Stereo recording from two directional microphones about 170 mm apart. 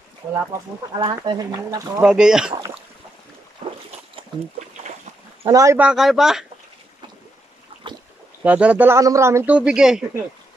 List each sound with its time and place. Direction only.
0.9 s speech: 25° right (ahead or behind)
2.0 s speech: 5° right (ahead or behind)
2.5 s boat: 25° right (ahead or behind)
5.4 s speech: 20° right (ahead or behind)
5.8 s speech: 5° right (ahead or behind)
7.8 s boat: 30° right (ahead or behind)
8.5 s a man's voice: 10° right (ahead or behind)